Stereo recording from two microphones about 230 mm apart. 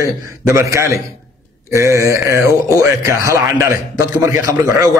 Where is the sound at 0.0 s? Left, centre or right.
Centre.